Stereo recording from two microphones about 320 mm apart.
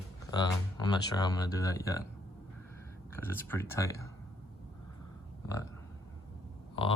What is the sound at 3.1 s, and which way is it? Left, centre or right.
Speech, centre.